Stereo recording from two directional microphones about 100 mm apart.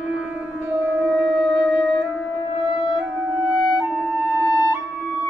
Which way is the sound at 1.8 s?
40° left (ahead or behind).